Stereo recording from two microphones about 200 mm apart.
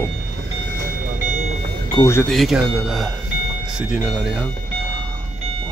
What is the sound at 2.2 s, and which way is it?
Speech, centre (ahead or behind).